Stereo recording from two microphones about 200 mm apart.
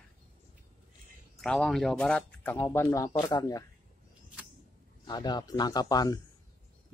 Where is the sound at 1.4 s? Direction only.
5° left (ahead or behind); by 3.6 s 20° left (ahead or behind).